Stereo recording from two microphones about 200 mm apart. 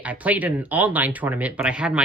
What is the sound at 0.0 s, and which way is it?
Speech, 10° right (ahead or behind).